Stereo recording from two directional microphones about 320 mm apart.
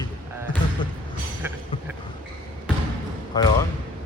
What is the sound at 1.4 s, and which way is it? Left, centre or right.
Music, centre.